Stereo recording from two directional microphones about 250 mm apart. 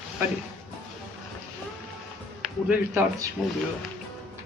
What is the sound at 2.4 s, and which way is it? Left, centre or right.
Speech, centre.